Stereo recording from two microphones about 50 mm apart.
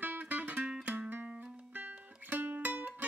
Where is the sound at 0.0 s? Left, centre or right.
Right.